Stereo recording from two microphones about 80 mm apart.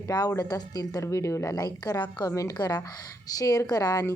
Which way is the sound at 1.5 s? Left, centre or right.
Left.